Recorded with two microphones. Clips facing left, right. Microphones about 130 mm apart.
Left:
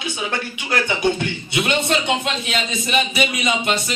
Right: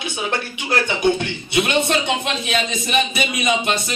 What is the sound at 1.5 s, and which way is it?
A man's voice, 20° right (ahead or behind).